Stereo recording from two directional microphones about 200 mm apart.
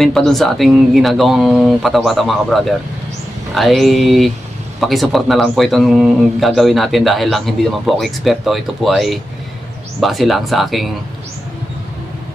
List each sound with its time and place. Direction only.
0.0 s speech: centre (ahead or behind)